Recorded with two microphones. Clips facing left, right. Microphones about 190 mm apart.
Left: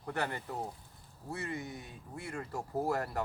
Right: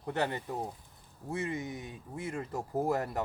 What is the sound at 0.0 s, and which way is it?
Speech, 20° right (ahead or behind).